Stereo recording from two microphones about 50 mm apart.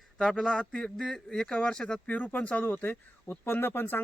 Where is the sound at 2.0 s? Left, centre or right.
Left.